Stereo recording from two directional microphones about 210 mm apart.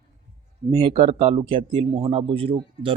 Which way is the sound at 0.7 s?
25° right (ahead or behind).